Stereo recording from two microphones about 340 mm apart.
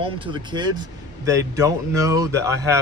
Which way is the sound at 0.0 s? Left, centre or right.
Centre.